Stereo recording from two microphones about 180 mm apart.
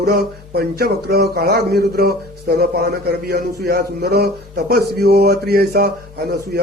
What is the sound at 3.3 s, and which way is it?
Speech, 65° right (ahead or behind).